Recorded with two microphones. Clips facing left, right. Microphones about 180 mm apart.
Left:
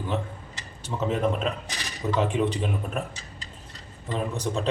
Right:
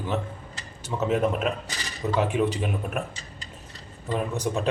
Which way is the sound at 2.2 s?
10° right (ahead or behind).